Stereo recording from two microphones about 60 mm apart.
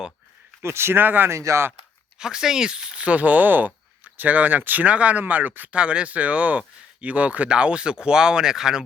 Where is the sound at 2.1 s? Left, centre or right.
Centre; by 5.7 s right.